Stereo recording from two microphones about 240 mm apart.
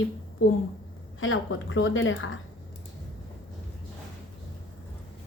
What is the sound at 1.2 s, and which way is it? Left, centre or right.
Speech, left.